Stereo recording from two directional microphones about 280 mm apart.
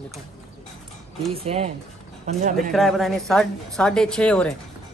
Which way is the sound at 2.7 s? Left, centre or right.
Centre.